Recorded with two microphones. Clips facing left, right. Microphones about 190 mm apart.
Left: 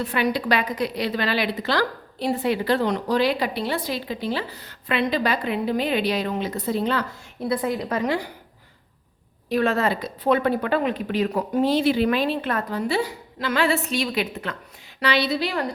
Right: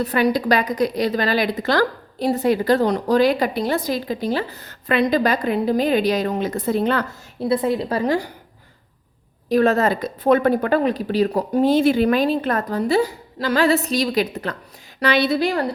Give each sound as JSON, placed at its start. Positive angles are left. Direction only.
{"t": 0.0, "sound": "a woman's voice", "side_deg": -40}
{"t": 7.3, "sound": "a woman's voice", "side_deg": -25}
{"t": 9.5, "sound": "a woman's voice", "side_deg": -40}
{"t": 15.0, "sound": "a woman's voice", "side_deg": -50}